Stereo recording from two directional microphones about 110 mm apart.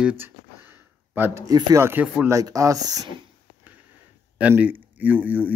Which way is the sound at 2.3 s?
30° right (ahead or behind).